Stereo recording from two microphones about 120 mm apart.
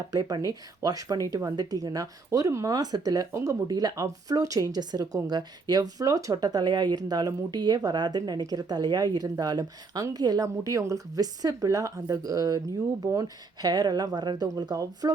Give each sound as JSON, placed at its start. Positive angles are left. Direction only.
{"t": 0.1, "sound": "a woman's voice", "side_deg": -30}